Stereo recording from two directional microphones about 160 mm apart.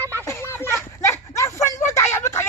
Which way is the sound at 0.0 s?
15° right (ahead or behind).